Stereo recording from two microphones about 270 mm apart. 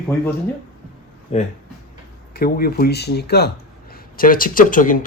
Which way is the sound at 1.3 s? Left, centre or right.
Left.